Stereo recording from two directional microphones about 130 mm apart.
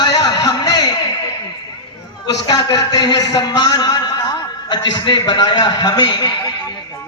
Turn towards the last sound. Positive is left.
turn(degrees=35)  # may be behind; listen again after turning